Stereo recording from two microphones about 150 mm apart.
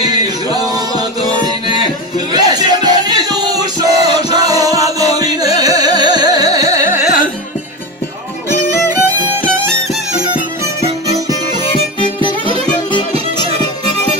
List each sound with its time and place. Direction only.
0.0 s music: 25° right (ahead or behind)
6.2 s carnatic music: 25° right (ahead or behind)
6.6 s carnatic music: 50° left (ahead or behind)